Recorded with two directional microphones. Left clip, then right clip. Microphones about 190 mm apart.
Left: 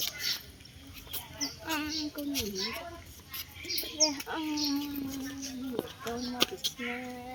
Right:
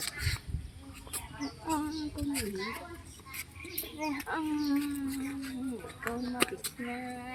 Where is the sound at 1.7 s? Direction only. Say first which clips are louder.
Right 1 dB; 15° right (ahead or behind).